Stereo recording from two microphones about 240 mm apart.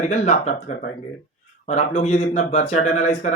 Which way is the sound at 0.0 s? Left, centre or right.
Left.